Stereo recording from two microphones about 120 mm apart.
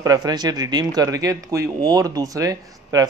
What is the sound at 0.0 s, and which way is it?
Speech, 30° right (ahead or behind).